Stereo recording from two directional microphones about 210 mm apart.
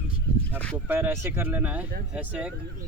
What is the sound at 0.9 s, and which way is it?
Speech, 10° right (ahead or behind).